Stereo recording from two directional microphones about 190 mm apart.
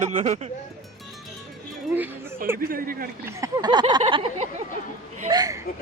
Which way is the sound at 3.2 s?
20° right (ahead or behind).